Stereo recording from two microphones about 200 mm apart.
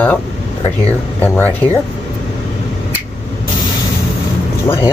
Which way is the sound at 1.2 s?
10° left (ahead or behind).